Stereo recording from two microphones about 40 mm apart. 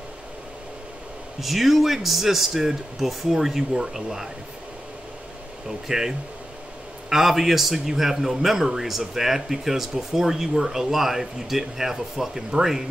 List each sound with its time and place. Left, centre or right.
1.4 s a man's voice: centre
5.9 s a man's voice: centre